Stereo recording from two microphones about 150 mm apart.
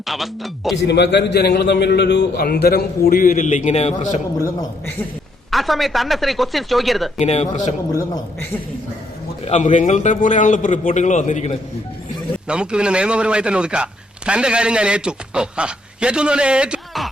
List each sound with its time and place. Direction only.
0.0 s speech: centre (ahead or behind)
0.9 s a man's voice: 90° left; by 4.2 s 50° left (ahead or behind)
5.5 s speech: centre (ahead or behind)
7.2 s speech: 45° left (ahead or behind)
9.4 s a man's voice: 50° left (ahead or behind)
12.5 s speech: 5° right (ahead or behind)